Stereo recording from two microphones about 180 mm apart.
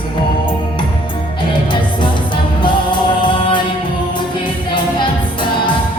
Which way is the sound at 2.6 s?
25° left (ahead or behind).